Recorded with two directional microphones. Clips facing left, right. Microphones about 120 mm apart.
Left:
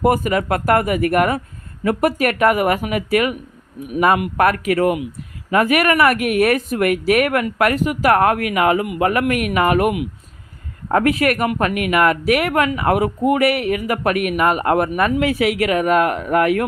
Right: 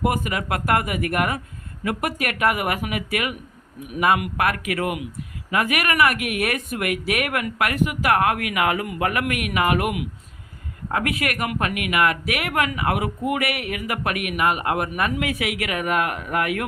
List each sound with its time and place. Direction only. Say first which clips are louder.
0.0 s speech: left 7 dB; 40° left (ahead or behind)